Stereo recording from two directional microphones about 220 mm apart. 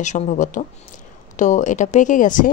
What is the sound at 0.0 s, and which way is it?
Speech, 30° left (ahead or behind).